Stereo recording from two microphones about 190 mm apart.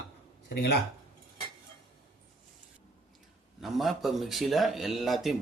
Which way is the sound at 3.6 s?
Centre (ahead or behind).